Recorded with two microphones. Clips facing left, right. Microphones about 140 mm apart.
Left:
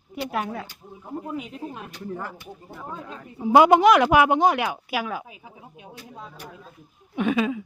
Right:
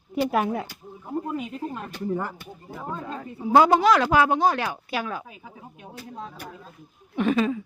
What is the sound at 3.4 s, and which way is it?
Speech, 15° left (ahead or behind).